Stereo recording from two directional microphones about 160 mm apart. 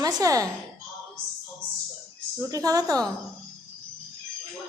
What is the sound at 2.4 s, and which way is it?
Speech, 20° right (ahead or behind).